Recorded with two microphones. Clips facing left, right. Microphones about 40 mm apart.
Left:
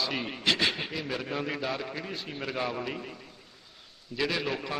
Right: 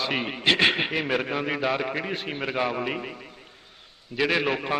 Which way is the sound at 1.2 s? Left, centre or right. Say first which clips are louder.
Right 6 dB; right.